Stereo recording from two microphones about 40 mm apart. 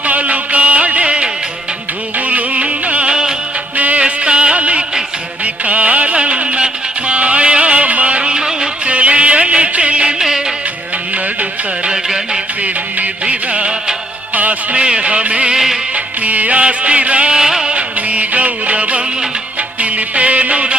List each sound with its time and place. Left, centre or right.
0.0 s music: right
3.1 s music: centre
3.8 s music: right
4.0 s music: right
8.9 s music: right
10.2 s music: centre
11.9 s music: centre
12.6 s music: right
14.3 s music: right
14.8 s music: right
15.5 s music of bollywood: centre
16.2 s music: right
17.3 s music: centre
17.7 s music: right